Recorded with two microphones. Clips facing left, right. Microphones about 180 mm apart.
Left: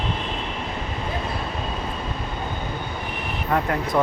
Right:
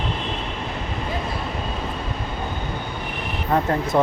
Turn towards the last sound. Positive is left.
turn(degrees=-25)  # may be behind; listen again after turning